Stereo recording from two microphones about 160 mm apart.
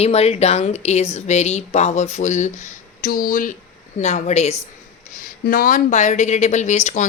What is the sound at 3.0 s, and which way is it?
Speech, 65° left (ahead or behind).